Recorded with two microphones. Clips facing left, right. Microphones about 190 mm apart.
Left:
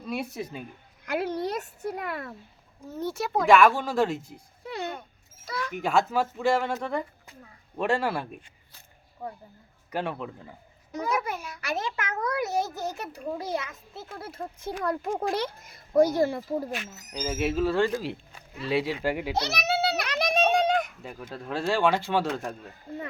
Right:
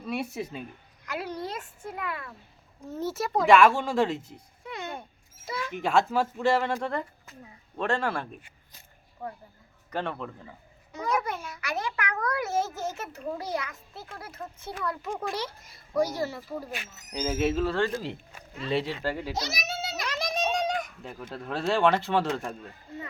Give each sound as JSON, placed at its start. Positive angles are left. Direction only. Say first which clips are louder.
{"t": 0.0, "sound": "speech", "louder": "even", "side_deg": 0}
{"t": 1.0, "sound": "a woman's voice", "louder": "left 6 dB", "side_deg": 55}
{"t": 2.8, "sound": "speech", "louder": "even", "side_deg": 0}
{"t": 4.6, "sound": "a sound", "louder": "left 4 dB", "side_deg": 35}
{"t": 5.5, "sound": "speech", "louder": "left 1 dB", "side_deg": -25}
{"t": 5.7, "sound": "speech", "louder": "even", "side_deg": 5}
{"t": 7.8, "sound": "speech", "louder": "left 2 dB", "side_deg": 10}
{"t": 11.7, "sound": "a child's voice", "louder": "left 1 dB", "side_deg": 20}
{"t": 14.7, "sound": "speech", "louder": "left 4 dB", "side_deg": 45}
{"t": 17.1, "sound": "speech", "louder": "right 2 dB", "side_deg": 5}
{"t": 19.3, "sound": "a sound", "louder": "left 6 dB", "side_deg": 65}
{"t": 21.0, "sound": "speech", "louder": "even", "side_deg": 5}
{"t": 22.9, "sound": "a sound", "louder": "left 4 dB", "side_deg": 55}